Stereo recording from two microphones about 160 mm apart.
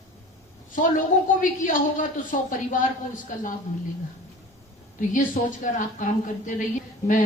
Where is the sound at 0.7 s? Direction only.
55° left (ahead or behind).